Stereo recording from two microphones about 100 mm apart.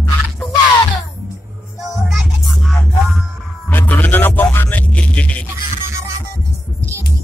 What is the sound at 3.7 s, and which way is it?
Music, 20° left (ahead or behind).